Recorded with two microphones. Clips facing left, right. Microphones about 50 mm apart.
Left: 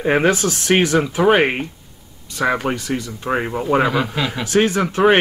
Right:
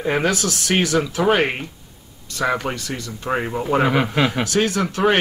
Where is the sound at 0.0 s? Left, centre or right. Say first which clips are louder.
Left 4 dB; left; by 3.6 s centre.